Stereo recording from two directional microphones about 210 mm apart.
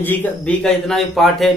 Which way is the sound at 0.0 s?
10° left (ahead or behind).